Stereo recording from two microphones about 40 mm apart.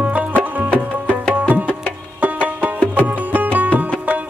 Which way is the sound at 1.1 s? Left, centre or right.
Right.